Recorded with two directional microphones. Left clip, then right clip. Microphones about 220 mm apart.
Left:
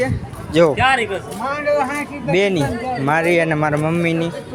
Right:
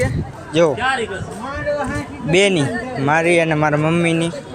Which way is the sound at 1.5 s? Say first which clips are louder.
Left 4 dB; 35° left (ahead or behind).